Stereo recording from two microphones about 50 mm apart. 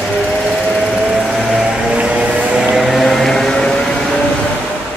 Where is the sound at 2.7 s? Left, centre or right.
Centre.